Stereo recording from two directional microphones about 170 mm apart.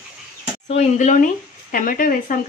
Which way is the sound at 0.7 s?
45° left (ahead or behind).